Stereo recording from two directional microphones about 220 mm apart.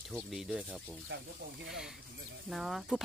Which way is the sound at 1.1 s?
55° right (ahead or behind).